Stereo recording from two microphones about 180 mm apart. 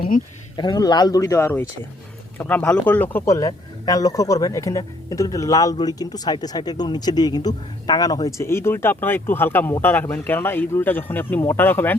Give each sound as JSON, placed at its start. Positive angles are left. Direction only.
{"t": 0.5, "sound": "speech", "side_deg": 25}